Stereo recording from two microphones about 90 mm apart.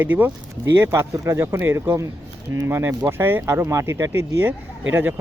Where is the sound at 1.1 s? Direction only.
35° right (ahead or behind).